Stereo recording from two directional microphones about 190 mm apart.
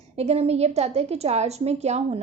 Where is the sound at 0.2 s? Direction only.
35° right (ahead or behind).